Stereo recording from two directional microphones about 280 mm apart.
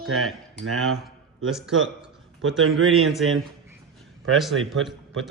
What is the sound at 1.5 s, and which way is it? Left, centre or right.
A man's voice, centre.